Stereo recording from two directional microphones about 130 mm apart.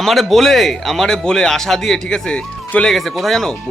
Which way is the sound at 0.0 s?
Centre (ahead or behind).